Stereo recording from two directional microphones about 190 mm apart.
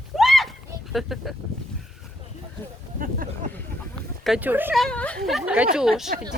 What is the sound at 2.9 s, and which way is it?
Speech, 45° right (ahead or behind).